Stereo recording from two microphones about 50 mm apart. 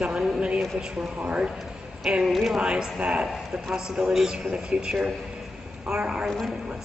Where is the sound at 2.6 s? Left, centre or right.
Centre.